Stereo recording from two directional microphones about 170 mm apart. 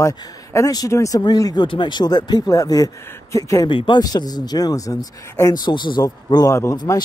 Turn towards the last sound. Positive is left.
turn(degrees=20)  # may be behind; listen again after turning